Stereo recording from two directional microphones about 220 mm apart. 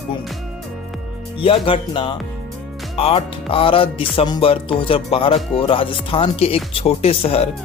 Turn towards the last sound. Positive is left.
turn(degrees=25)  # may be behind; listen again after turning